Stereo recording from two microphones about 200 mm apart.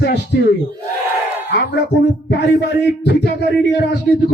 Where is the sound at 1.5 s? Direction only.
60° left (ahead or behind).